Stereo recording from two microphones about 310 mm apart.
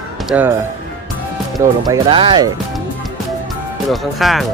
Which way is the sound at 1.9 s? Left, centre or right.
Centre.